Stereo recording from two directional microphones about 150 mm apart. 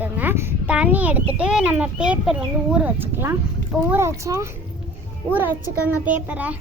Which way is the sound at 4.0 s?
20° right (ahead or behind).